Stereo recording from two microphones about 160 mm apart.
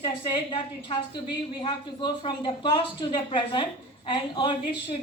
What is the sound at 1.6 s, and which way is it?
Speech, 30° left (ahead or behind).